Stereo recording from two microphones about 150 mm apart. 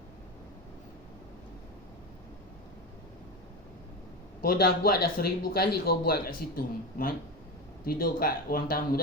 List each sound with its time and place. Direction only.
4.4 s speech: 90° left
7.9 s speech: 75° left (ahead or behind)